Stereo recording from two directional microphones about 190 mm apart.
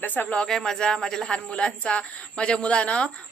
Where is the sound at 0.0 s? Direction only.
10° left (ahead or behind).